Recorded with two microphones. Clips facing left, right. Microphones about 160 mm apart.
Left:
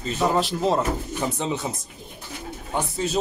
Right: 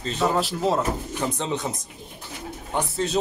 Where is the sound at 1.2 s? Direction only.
5° left (ahead or behind).